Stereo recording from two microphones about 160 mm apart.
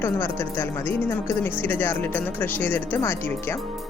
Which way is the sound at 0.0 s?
15° left (ahead or behind).